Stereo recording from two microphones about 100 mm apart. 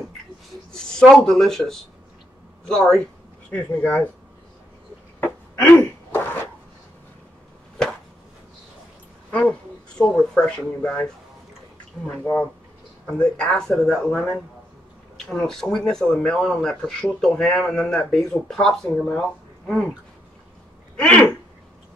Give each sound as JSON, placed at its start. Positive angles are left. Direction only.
{"t": 0.7, "sound": "speech", "side_deg": 5}
{"t": 5.2, "sound": "a sound", "side_deg": 20}
{"t": 9.3, "sound": "a sound", "side_deg": 10}
{"t": 10.3, "sound": "speech", "side_deg": 10}
{"t": 12.2, "sound": "speech", "side_deg": 20}
{"t": 13.0, "sound": "speech", "side_deg": 10}
{"t": 20.9, "sound": "speech", "side_deg": 10}